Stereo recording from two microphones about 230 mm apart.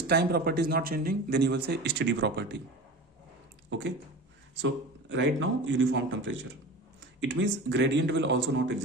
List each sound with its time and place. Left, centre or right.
0.1 s speech: right
3.7 s a man's voice: right